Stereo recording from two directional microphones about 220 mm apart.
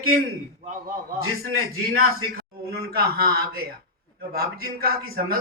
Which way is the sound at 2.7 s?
45° right (ahead or behind).